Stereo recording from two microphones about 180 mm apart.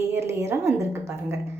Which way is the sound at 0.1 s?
15° right (ahead or behind).